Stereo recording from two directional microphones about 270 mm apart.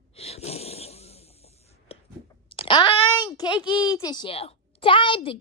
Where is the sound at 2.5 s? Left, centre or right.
Centre.